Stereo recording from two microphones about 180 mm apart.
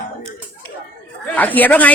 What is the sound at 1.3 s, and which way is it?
Speech, 10° left (ahead or behind).